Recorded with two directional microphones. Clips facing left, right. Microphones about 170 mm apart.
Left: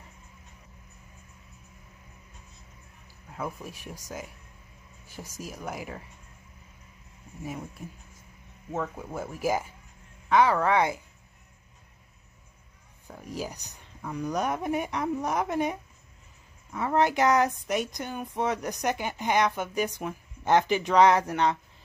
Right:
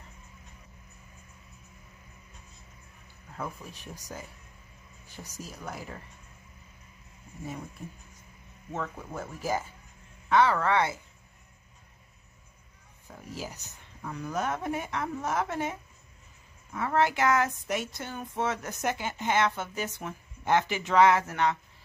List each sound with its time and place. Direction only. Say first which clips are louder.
3.4 s speech: left 5 dB; 10° left (ahead or behind)
5.4 s speech: left 3 dB; 10° left (ahead or behind)
8.7 s speech: left 3 dB; 10° left (ahead or behind)
13.3 s speech: left 4 dB; 15° left (ahead or behind)